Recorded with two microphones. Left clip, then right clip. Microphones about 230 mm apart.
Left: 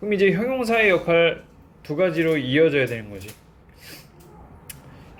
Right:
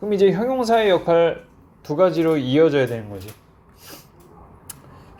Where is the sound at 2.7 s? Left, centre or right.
Right.